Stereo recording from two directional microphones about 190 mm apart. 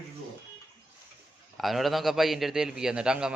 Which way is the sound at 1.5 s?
Centre (ahead or behind).